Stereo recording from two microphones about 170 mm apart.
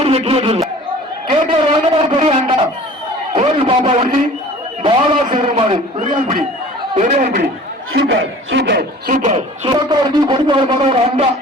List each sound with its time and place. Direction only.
0.0 s speech: 35° right (ahead or behind)
1.3 s a sound: 30° right (ahead or behind)
6.9 s speech: 45° right (ahead or behind)
7.9 s a man's voice: 85° right; by 9.4 s 45° right (ahead or behind)
9.6 s a man's voice: 25° right (ahead or behind)